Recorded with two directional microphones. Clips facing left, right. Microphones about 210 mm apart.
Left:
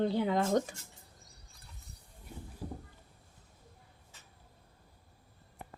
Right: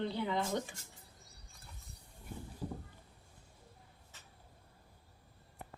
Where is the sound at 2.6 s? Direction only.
5° left (ahead or behind).